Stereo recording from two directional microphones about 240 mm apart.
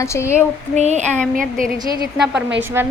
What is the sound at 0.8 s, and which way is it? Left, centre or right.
Speech, right.